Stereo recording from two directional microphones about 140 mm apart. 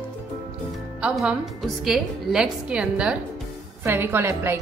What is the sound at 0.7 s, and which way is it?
A woman's voice, 5° right (ahead or behind).